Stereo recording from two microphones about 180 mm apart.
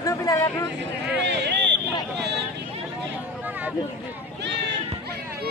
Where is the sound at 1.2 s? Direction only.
70° right (ahead or behind).